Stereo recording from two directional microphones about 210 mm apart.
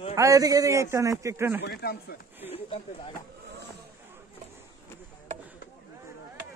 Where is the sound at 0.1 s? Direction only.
15° right (ahead or behind).